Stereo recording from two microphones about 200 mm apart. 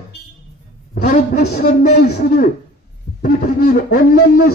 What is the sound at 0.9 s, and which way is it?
Speech, 50° left (ahead or behind).